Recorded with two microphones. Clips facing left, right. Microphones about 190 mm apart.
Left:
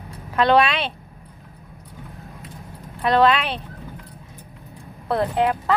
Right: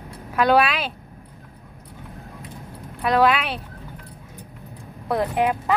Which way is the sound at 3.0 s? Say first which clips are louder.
Left 1 dB; 5° right (ahead or behind).